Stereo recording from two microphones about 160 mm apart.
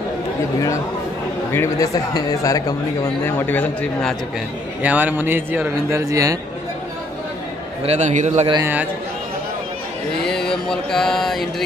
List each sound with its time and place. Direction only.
1.5 s speech: 20° left (ahead or behind)
4.8 s speech: 10° right (ahead or behind)
7.8 s a man's voice: 45° right (ahead or behind)
10.2 s mantra: 5° left (ahead or behind)